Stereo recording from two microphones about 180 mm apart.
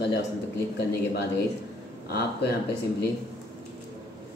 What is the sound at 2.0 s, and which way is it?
Speech, 60° left (ahead or behind).